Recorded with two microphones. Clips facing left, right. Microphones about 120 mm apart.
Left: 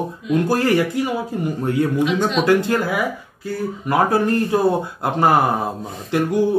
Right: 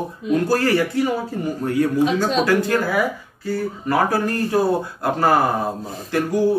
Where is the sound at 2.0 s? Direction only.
35° right (ahead or behind).